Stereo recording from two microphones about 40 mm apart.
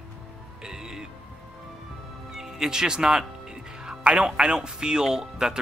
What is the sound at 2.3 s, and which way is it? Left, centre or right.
Speech, centre.